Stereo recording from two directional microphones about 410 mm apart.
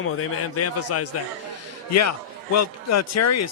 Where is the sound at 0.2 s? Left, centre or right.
Left.